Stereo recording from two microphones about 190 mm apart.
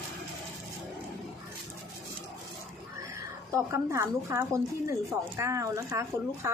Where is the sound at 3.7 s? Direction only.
15° right (ahead or behind).